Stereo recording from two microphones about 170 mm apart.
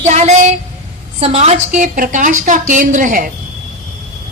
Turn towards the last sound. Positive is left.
turn(degrees=-50)  # may be behind; listen again after turning